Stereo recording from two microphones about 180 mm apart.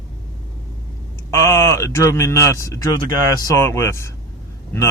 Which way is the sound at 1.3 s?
15° left (ahead or behind).